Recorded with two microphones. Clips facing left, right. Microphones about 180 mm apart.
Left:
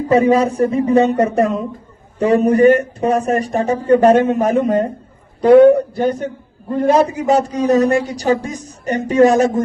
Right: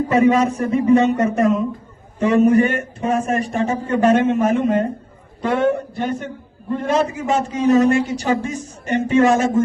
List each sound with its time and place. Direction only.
0.1 s a man's voice: 35° left (ahead or behind)